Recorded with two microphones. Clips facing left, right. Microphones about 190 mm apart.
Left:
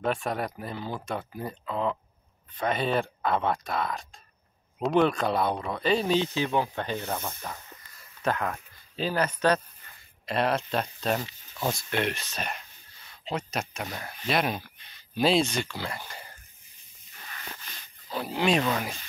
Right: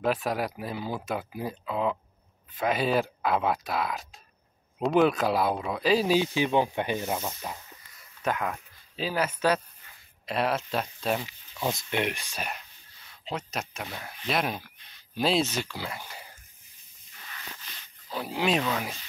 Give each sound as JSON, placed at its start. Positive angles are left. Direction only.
{"t": 0.0, "sound": "speech", "side_deg": -5}
{"t": 17.7, "sound": "a sound", "side_deg": 50}
{"t": 18.1, "sound": "speech", "side_deg": 0}